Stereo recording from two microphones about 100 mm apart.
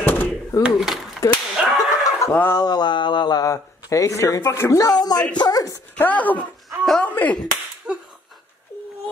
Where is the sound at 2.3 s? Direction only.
20° left (ahead or behind).